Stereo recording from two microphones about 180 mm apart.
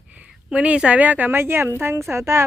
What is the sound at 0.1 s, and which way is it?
A woman's voice, 5° right (ahead or behind).